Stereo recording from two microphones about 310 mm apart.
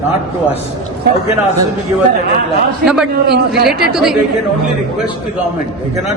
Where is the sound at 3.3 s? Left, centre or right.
Right.